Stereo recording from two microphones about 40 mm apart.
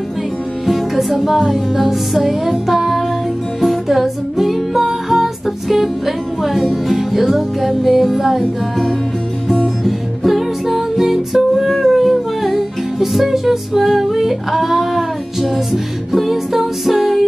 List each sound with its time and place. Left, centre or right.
0.7 s music: centre